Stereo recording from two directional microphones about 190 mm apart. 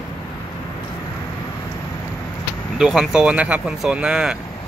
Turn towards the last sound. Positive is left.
turn(degrees=-5)  # may be behind; listen again after turning